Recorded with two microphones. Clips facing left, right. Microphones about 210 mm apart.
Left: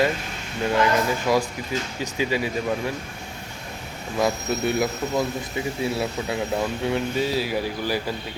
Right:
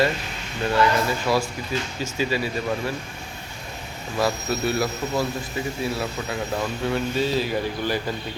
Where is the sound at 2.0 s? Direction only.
15° left (ahead or behind).